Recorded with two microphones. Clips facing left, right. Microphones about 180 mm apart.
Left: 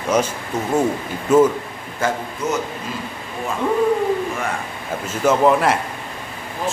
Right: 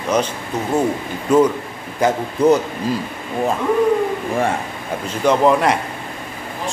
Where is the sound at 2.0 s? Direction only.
15° right (ahead or behind).